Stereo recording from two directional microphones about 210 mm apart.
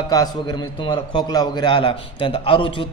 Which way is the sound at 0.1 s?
20° left (ahead or behind).